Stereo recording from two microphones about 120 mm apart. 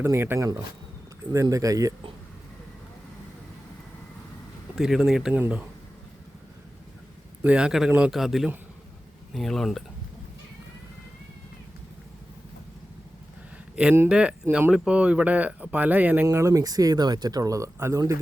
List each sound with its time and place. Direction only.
0.0 s speech: 20° right (ahead or behind)
4.7 s speech: 5° right (ahead or behind)
7.4 s speech: 10° right (ahead or behind)
13.8 s speech: 10° right (ahead or behind)
16.2 s speech: 25° right (ahead or behind)